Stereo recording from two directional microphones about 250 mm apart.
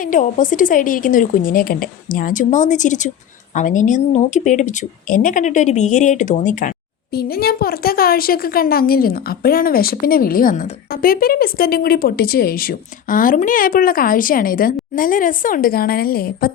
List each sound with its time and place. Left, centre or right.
0.1 s a woman's voice: left